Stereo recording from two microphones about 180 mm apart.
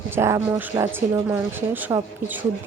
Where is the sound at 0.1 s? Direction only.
15° right (ahead or behind).